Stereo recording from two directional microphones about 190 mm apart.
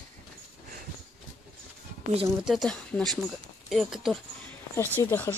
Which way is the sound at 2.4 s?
Centre (ahead or behind).